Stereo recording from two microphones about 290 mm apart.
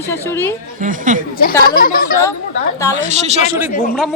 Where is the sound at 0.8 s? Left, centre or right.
Right.